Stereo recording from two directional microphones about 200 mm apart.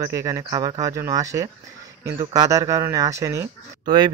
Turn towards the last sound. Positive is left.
turn(degrees=-25)  # may be behind; listen again after turning